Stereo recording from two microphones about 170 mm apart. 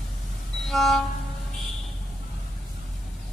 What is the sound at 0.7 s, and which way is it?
Train, centre (ahead or behind).